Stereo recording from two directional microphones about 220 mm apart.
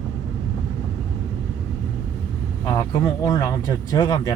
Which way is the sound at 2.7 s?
15° left (ahead or behind).